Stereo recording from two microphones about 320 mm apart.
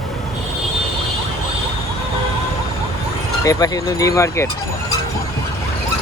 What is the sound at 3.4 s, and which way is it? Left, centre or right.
Speech, centre.